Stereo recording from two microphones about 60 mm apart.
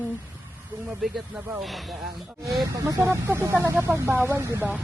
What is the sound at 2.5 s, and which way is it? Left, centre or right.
Speech, right.